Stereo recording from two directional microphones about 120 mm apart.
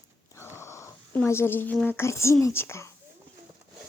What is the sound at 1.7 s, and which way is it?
A woman's voice, 15° left (ahead or behind).